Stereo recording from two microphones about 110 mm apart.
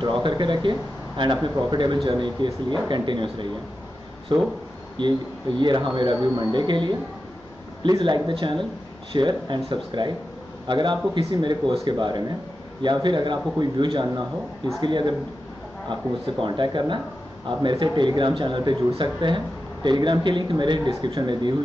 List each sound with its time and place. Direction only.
0.0 s speech: 45° right (ahead or behind)
16.4 s speech: 45° right (ahead or behind)